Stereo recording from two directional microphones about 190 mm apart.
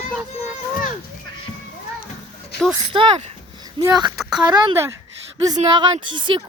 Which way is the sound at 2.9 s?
25° right (ahead or behind).